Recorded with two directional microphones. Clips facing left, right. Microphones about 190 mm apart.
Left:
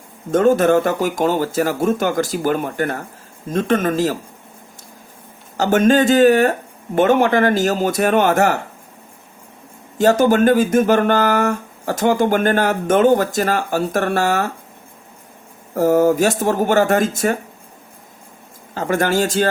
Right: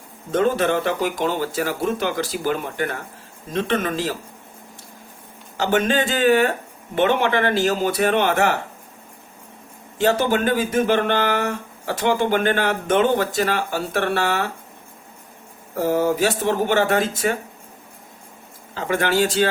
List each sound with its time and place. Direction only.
0.3 s speech: 45° left (ahead or behind)
5.5 s speech: 45° left (ahead or behind)
10.0 s speech: 45° left (ahead or behind)
15.7 s speech: 45° left (ahead or behind)
18.7 s speech: 45° left (ahead or behind)